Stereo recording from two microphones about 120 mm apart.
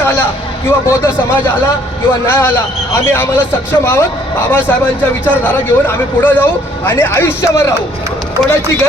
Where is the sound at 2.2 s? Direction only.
20° left (ahead or behind).